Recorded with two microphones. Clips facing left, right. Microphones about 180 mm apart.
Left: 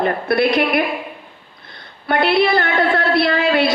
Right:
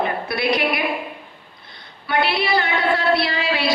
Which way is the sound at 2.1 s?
50° left (ahead or behind).